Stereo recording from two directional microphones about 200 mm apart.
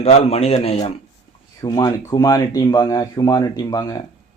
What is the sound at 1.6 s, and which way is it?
Speech, 20° left (ahead or behind).